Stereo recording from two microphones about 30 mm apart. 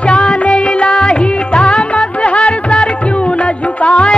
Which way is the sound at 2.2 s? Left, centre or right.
Left.